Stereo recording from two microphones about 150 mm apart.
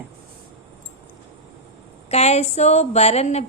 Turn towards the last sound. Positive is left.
turn(degrees=45)  # may be behind; listen again after turning